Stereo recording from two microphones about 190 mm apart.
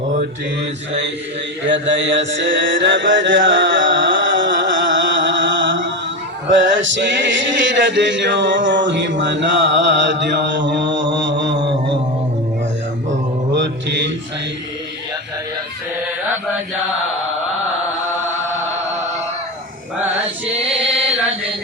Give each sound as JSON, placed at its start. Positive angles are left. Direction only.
{"t": 1.6, "sound": "mantra", "side_deg": -70}
{"t": 6.5, "sound": "male singing", "side_deg": -75}
{"t": 13.5, "sound": "mantra", "side_deg": -65}
{"t": 20.5, "sound": "chant", "side_deg": -30}